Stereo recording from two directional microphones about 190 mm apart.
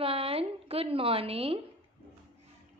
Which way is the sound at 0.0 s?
30° right (ahead or behind).